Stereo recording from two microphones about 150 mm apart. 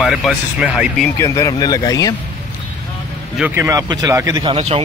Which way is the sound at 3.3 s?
15° right (ahead or behind).